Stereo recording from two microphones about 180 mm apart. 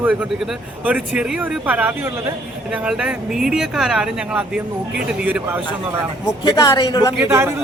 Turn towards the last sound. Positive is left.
turn(degrees=-15)  # may be behind; listen again after turning